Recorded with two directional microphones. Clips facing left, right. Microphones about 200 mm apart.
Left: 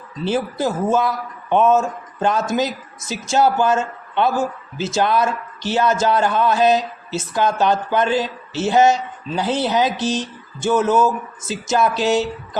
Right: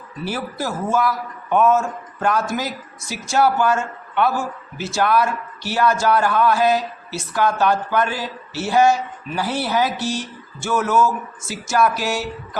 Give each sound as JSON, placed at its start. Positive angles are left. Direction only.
{"t": 0.3, "sound": "a man's voice", "side_deg": 20}